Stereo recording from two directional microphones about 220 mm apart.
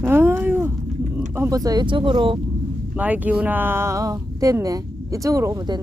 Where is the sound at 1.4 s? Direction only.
15° right (ahead or behind).